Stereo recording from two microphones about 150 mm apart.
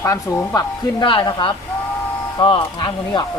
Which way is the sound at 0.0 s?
20° left (ahead or behind).